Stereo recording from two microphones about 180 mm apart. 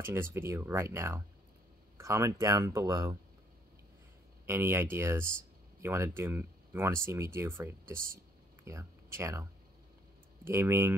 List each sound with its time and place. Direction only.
0.0 s speech: 15° right (ahead or behind)
4.5 s speech: 15° right (ahead or behind)